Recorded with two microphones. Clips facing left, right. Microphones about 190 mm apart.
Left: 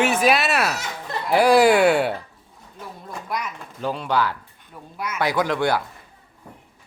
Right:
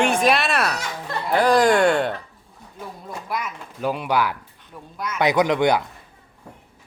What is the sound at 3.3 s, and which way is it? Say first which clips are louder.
Speech: even; centre (ahead or behind).